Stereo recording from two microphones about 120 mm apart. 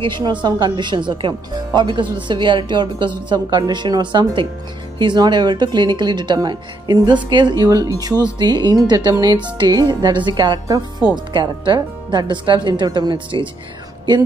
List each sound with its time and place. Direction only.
0.0 s speech: 40° right (ahead or behind)